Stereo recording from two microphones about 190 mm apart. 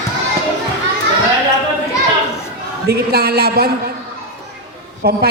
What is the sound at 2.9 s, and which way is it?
Speech, 55° right (ahead or behind).